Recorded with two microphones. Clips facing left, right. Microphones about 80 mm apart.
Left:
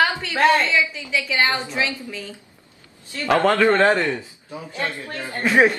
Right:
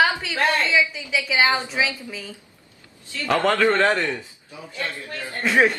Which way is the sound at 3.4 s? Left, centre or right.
Left.